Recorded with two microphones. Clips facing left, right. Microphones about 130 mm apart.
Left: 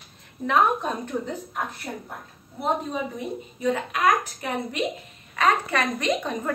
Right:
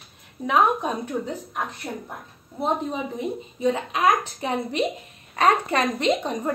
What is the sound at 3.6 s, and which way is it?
A woman's voice, 25° right (ahead or behind).